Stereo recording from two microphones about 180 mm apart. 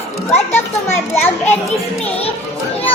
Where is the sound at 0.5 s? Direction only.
10° left (ahead or behind).